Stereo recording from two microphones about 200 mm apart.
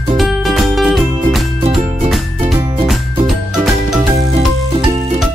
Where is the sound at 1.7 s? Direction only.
30° right (ahead or behind).